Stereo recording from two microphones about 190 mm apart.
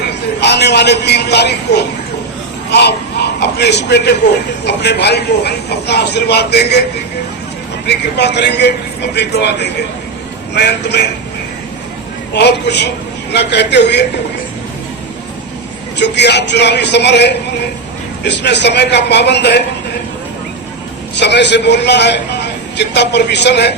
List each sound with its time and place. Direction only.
0.3 s a man's voice: 60° left (ahead or behind)
7.9 s a man's voice: 65° left (ahead or behind)
12.4 s a man's voice: 60° left (ahead or behind)
16.0 s a man's voice: 65° left (ahead or behind)
21.2 s a man's voice: 65° left (ahead or behind)